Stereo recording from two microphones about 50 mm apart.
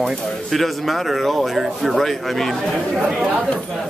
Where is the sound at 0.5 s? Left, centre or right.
Centre.